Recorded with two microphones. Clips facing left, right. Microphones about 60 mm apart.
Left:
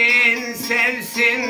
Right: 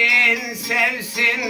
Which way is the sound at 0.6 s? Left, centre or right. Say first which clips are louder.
Even; centre.